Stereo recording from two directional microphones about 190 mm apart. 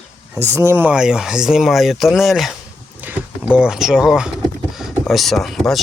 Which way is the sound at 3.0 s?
10° right (ahead or behind).